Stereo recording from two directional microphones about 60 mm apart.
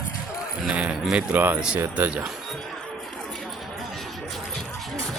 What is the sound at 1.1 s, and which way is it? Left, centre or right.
Speech, right.